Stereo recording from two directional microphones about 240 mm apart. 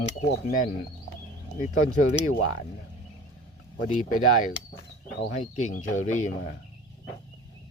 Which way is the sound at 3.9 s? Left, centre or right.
Left.